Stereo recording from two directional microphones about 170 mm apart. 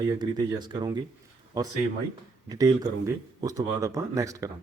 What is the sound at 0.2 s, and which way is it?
Speech, 25° right (ahead or behind).